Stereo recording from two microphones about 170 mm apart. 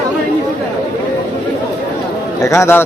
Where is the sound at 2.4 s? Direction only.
15° left (ahead or behind).